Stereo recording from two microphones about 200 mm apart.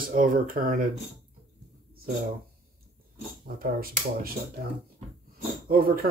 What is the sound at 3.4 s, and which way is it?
Speech, 45° right (ahead or behind).